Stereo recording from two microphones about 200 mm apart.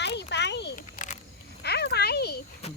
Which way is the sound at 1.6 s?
55° left (ahead or behind).